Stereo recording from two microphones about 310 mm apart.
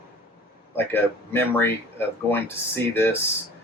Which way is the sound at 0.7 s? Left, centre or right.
Centre.